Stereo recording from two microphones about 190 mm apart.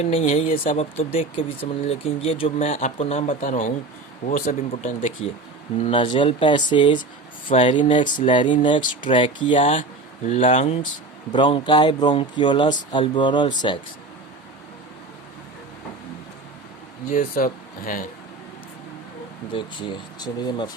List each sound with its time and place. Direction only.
0.0 s speech: 30° left (ahead or behind)
0.4 s speech: 50° left (ahead or behind)
0.8 s speech: 30° left (ahead or behind); by 4.5 s 50° left (ahead or behind)
4.7 s speech: 30° left (ahead or behind)
5.8 s speech: 25° left (ahead or behind)
17.1 s speech: 45° left (ahead or behind)
19.5 s speech: 25° left (ahead or behind)